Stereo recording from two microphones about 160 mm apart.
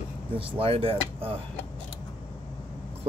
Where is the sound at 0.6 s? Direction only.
35° right (ahead or behind).